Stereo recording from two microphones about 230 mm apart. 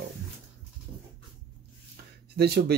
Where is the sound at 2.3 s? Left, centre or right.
Right.